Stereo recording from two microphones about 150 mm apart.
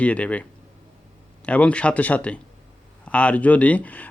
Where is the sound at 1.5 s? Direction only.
10° left (ahead or behind).